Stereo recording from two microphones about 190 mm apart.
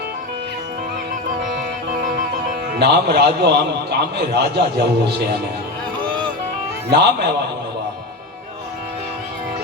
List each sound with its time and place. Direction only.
2.7 s a man's voice: 60° right (ahead or behind)
6.9 s a man's voice: 60° right (ahead or behind)